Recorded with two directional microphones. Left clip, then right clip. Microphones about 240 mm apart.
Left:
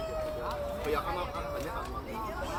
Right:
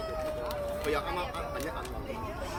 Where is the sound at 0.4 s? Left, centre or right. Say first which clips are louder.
Right 1 dB; right.